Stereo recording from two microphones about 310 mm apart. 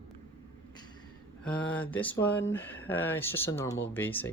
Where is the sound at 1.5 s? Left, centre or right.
Centre.